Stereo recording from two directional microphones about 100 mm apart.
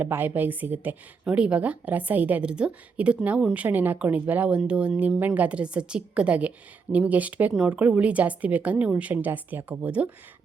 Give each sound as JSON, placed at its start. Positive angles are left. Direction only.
{"t": 0.0, "sound": "a woman's voice", "side_deg": -20}